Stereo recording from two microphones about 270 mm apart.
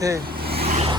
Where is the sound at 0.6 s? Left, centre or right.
Right.